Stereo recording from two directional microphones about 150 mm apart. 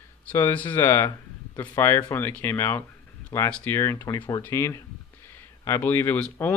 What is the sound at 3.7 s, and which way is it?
Speech, 15° left (ahead or behind).